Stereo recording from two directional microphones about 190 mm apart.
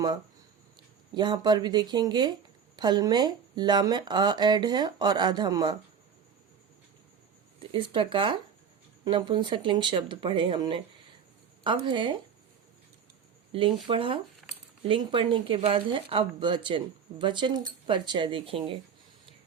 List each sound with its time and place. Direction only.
1.1 s speech: 25° right (ahead or behind)
7.6 s speech: 25° right (ahead or behind)
13.5 s speech: 25° right (ahead or behind)